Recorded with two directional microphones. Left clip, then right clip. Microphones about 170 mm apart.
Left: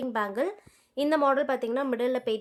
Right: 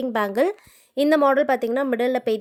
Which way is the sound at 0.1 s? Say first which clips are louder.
Right 8 dB; 40° right (ahead or behind).